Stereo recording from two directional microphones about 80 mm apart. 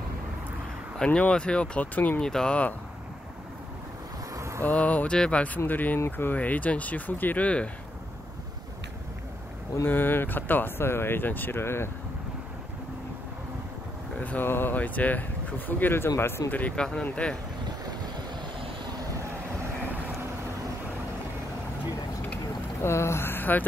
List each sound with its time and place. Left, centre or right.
0.9 s speech: centre
4.4 s a sound: right
4.6 s speech: centre
9.8 s speech: left
14.2 s speech: left
22.8 s a sound: left